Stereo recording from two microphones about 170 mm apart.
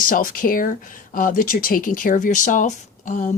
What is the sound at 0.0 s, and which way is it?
Speech, 55° left (ahead or behind).